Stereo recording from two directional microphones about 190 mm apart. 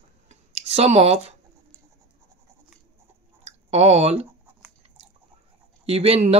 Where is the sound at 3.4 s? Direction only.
35° right (ahead or behind).